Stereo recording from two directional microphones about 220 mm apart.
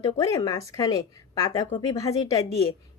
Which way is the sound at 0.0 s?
15° left (ahead or behind).